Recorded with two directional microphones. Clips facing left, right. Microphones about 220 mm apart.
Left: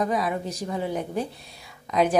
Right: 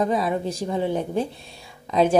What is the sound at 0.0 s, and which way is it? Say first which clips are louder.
Speech: right 3 dB; 25° right (ahead or behind).